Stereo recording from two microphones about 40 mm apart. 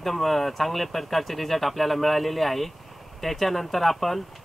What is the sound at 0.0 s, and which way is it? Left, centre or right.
Speech, centre.